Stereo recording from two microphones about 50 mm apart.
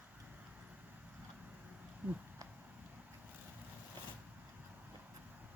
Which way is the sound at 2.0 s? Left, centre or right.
Right.